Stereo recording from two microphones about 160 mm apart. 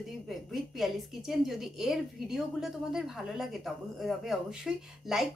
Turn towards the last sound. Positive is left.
turn(degrees=0)  # may be behind; listen again after turning